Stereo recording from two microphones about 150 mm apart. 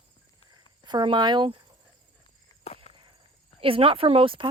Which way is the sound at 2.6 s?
45° left (ahead or behind).